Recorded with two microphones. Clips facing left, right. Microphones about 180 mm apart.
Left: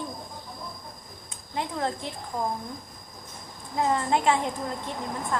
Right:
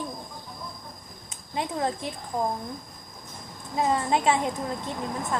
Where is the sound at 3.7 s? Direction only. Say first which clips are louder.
Even; 20° right (ahead or behind).